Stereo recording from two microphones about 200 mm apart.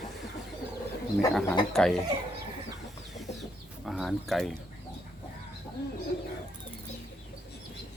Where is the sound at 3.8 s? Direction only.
Centre (ahead or behind).